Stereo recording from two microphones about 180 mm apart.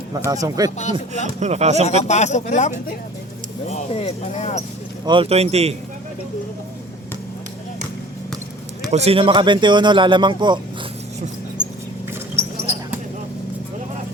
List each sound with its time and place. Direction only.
0.3 s speech: 20° right (ahead or behind)
0.8 s speech: 40° left (ahead or behind)
1.4 s speech: 40° right (ahead or behind)
1.8 s speech: 40° left (ahead or behind)
5.0 s speech: 30° right (ahead or behind)
8.9 s speech: 35° right (ahead or behind)